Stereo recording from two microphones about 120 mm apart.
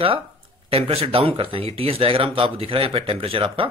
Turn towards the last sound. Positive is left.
turn(degrees=-50)  # may be behind; listen again after turning